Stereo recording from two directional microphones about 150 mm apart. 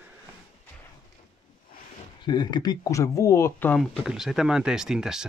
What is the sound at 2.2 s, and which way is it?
Speech, 30° left (ahead or behind).